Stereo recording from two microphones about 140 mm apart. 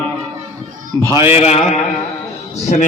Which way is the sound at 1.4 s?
50° left (ahead or behind).